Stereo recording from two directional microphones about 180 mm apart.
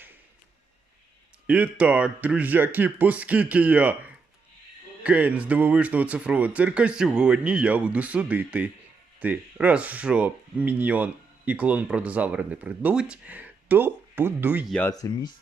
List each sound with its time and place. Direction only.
1.5 s speech: 5° right (ahead or behind)
14.7 s speech: 10° left (ahead or behind)
14.9 s speech: 20° left (ahead or behind)